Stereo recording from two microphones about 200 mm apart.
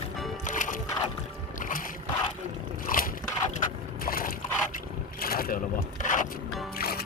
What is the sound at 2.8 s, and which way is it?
Biting, 45° left (ahead or behind).